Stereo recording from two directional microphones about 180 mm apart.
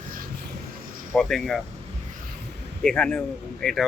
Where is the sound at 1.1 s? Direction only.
5° left (ahead or behind).